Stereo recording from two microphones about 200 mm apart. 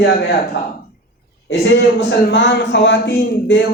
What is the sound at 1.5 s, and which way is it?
A man's voice, 65° left (ahead or behind).